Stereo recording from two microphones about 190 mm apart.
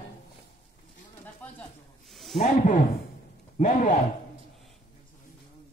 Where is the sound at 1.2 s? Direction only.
10° left (ahead or behind).